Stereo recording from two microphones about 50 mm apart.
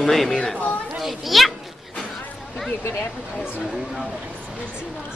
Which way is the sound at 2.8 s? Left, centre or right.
Left.